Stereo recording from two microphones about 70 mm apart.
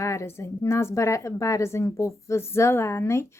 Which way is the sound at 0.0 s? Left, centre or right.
Left.